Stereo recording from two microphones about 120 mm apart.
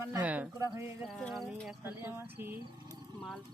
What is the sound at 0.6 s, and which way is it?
Speech, 25° right (ahead or behind).